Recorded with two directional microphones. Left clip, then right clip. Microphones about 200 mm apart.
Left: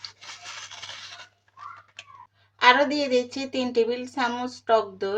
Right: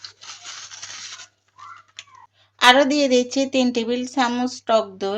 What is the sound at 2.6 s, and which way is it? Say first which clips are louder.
Speech: right 4 dB; 45° right (ahead or behind).